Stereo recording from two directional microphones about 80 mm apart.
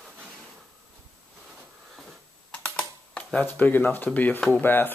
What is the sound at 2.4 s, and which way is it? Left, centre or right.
Typing, centre.